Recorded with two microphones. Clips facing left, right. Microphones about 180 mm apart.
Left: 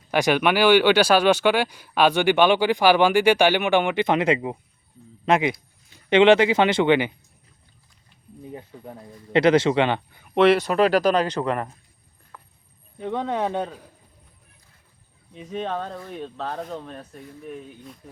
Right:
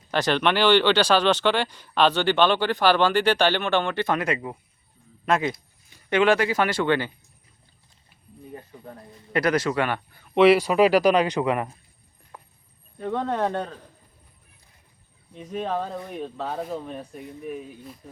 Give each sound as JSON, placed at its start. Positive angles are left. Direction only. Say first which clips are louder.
{"t": 0.1, "sound": "speech", "louder": "left 2 dB", "side_deg": 10}
{"t": 9.3, "sound": "speech", "louder": "left 5 dB", "side_deg": 25}
{"t": 10.3, "sound": "speech", "louder": "right 1 dB", "side_deg": -5}
{"t": 12.3, "sound": "a sound", "louder": "right 1 dB", "side_deg": -20}
{"t": 13.0, "sound": "speech", "louder": "even", "side_deg": 5}
{"t": 15.4, "sound": "speech", "louder": "right 1 dB", "side_deg": 0}